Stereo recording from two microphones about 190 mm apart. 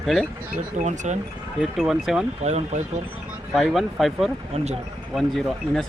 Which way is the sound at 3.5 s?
Centre (ahead or behind).